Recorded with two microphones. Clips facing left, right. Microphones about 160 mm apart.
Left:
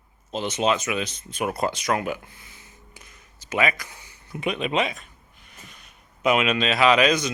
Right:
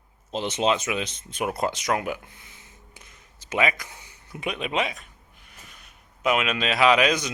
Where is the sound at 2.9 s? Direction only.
25° right (ahead or behind).